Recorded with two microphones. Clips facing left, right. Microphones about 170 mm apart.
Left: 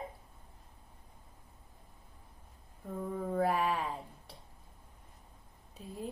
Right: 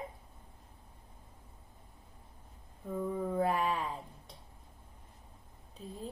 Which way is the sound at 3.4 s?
5° left (ahead or behind).